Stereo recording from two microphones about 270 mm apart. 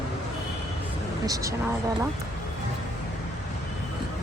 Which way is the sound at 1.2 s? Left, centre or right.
Centre.